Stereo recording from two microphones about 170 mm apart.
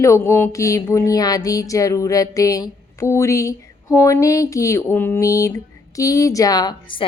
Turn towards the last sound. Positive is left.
turn(degrees=25)  # may be behind; listen again after turning